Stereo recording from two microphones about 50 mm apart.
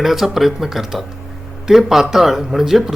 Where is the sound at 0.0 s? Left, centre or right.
Centre.